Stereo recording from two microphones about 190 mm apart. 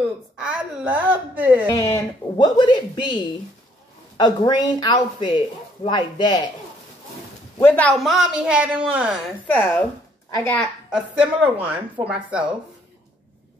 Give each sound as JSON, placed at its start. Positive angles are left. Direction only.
{"t": 0.4, "sound": "speech", "side_deg": -5}
{"t": 1.8, "sound": "speech", "side_deg": 20}
{"t": 4.2, "sound": "speech", "side_deg": 20}
{"t": 7.5, "sound": "a man's voice", "side_deg": 10}
{"t": 9.5, "sound": "speech", "side_deg": 10}
{"t": 10.9, "sound": "speech", "side_deg": -5}